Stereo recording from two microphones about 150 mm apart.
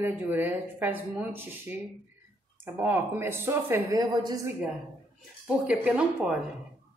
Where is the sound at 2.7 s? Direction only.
15° right (ahead or behind).